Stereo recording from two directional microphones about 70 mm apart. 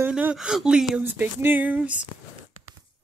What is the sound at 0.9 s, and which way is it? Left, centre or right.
Speech, right.